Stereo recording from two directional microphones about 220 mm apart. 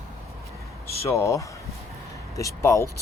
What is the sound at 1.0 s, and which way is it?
Speech, 15° left (ahead or behind).